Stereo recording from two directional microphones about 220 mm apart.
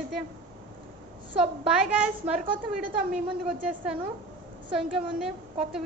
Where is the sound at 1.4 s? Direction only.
5° right (ahead or behind).